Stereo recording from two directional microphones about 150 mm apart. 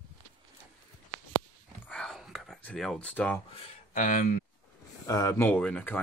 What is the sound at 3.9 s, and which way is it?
Speech, 60° left (ahead or behind).